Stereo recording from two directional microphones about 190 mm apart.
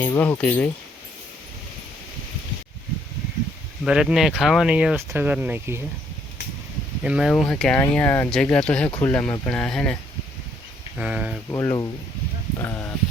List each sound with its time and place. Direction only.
0.0 s speech: 10° left (ahead or behind)
3.8 s speech: 5° right (ahead or behind)
7.0 s speech: 5° right (ahead or behind)
11.5 s speech: 20° left (ahead or behind)